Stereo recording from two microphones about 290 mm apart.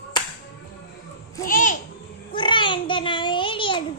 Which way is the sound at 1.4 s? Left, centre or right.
Left.